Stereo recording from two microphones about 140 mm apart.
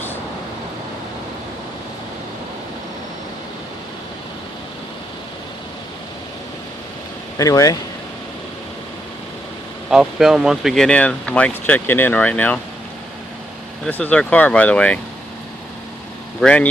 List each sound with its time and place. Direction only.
7.3 s speech: 25° left (ahead or behind)
9.9 s speech: 5° right (ahead or behind)
13.8 s speech: 10° left (ahead or behind)
16.4 s speech: 10° left (ahead or behind)